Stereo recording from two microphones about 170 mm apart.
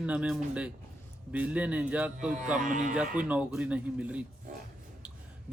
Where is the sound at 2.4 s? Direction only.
50° right (ahead or behind).